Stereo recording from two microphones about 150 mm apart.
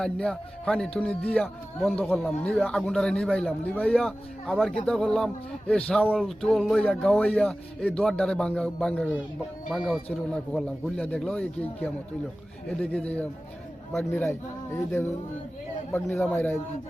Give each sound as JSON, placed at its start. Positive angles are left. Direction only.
{"t": 0.0, "sound": "a man's voice", "side_deg": 5}
{"t": 12.6, "sound": "speech", "side_deg": 5}